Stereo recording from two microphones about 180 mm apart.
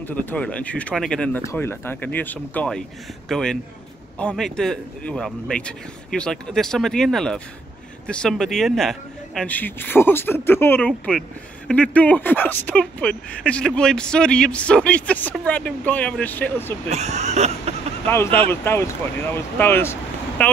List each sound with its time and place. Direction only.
0.0 s a man's voice: 10° left (ahead or behind)
16.9 s speech: 40° right (ahead or behind)
18.0 s a man's voice: 10° left (ahead or behind)